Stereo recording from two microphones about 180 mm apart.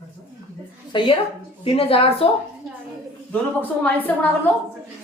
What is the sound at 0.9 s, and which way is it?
A woman's voice, 25° left (ahead or behind).